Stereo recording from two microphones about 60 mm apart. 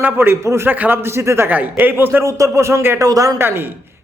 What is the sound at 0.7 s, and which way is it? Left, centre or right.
Speech, right.